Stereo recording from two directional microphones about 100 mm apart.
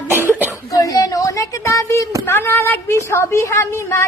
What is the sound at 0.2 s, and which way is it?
Cough, 20° right (ahead or behind).